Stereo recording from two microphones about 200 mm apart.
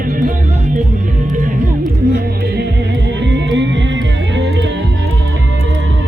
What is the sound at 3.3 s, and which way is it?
Music, 65° right (ahead or behind).